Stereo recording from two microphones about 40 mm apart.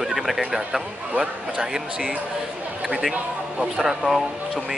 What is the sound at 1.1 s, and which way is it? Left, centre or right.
A man's voice, right.